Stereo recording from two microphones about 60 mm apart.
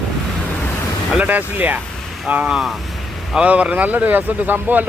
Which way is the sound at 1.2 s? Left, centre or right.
Right.